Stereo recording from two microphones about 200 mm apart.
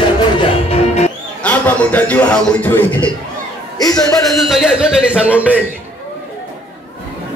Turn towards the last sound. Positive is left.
turn(degrees=-5)  # may be behind; listen again after turning